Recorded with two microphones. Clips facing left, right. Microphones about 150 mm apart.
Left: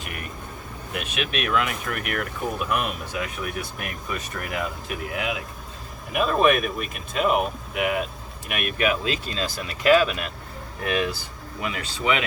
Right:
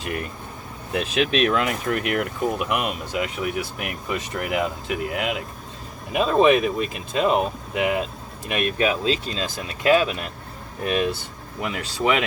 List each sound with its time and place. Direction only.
0.0 s speech: 30° right (ahead or behind)
11.6 s speech: 40° right (ahead or behind)